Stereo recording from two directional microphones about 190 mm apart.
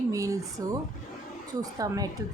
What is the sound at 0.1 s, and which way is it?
Speech, 15° right (ahead or behind).